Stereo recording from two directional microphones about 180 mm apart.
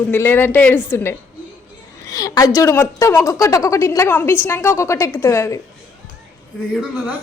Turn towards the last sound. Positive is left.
turn(degrees=-5)  # may be behind; listen again after turning